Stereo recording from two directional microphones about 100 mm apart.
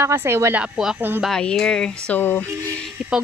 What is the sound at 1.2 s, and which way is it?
Speech, 5° left (ahead or behind).